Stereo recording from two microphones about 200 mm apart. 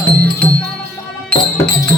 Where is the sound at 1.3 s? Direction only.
5° left (ahead or behind).